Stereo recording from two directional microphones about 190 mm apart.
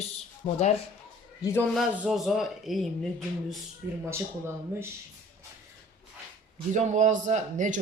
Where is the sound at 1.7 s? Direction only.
Centre (ahead or behind).